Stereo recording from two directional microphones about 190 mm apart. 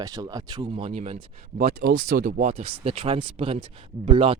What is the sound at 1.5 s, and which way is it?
Speech, 60° right (ahead or behind).